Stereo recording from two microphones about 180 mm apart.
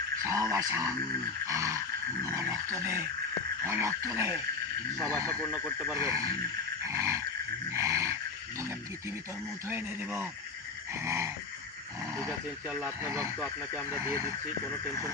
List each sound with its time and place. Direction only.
0.2 s wild animals: 20° right (ahead or behind)
0.5 s dog: 15° right (ahead or behind)
5.9 s dog: 15° right (ahead or behind)
7.7 s wild animals: 15° right (ahead or behind)
9.6 s dog: 10° right (ahead or behind)
12.6 s dog: 10° right (ahead or behind)
13.4 s speech: 5° right (ahead or behind)
14.1 s dog: 15° right (ahead or behind)